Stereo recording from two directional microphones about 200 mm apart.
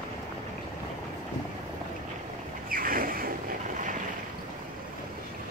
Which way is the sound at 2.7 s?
45° right (ahead or behind).